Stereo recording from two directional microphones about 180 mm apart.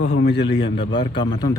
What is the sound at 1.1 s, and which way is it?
Speech, 25° left (ahead or behind).